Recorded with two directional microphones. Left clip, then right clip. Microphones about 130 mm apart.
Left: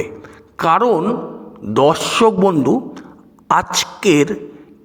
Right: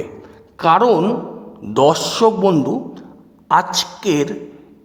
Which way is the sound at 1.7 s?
15° left (ahead or behind).